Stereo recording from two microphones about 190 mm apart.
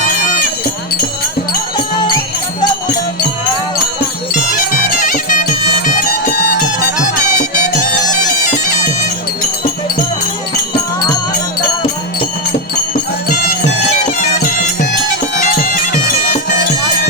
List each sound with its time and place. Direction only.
4.5 s music: 45° left (ahead or behind)
8.1 s bagpipes: 40° left (ahead or behind)
15.4 s bagpipes: 45° left (ahead or behind)